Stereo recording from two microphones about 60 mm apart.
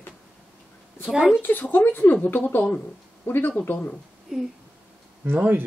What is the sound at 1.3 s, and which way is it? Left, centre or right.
Speech, left.